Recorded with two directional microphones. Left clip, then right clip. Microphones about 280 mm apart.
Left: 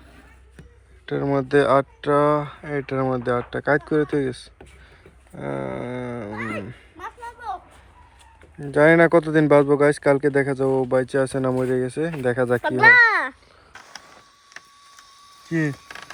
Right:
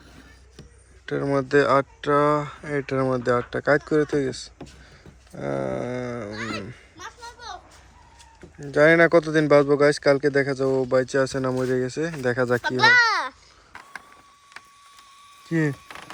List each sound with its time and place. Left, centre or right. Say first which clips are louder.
1.0 s speech: left 1 dB; centre
8.6 s speech: left 1 dB; centre
12.6 s a child's voice: left 4 dB; centre
15.4 s speech: even; centre